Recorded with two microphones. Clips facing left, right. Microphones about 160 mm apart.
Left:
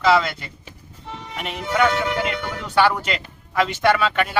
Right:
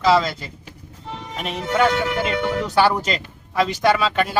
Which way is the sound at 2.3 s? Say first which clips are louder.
Right 3 dB; 40° right (ahead or behind).